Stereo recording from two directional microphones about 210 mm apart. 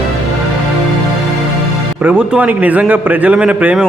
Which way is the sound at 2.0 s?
5° right (ahead or behind).